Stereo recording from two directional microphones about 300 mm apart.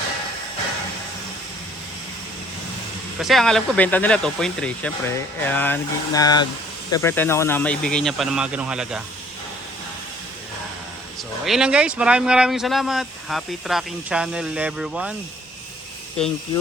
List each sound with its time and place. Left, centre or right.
3.2 s speech: centre
11.4 s speech: centre